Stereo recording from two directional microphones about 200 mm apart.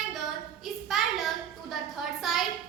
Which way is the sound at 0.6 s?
Centre (ahead or behind).